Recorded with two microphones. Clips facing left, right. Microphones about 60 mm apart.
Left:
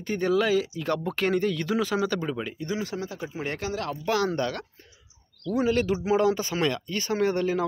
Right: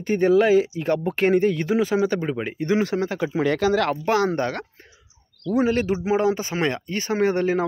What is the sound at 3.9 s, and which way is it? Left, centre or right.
Speech, right.